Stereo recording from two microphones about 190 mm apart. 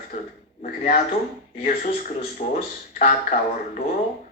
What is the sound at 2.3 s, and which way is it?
Music, 35° left (ahead or behind).